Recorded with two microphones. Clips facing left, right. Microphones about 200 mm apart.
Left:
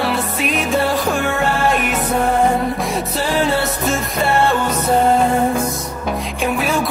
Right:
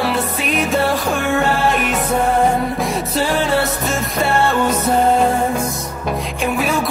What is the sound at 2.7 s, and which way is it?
Music, centre (ahead or behind).